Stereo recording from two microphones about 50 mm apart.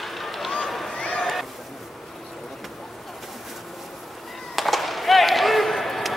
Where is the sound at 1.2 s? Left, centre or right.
Centre.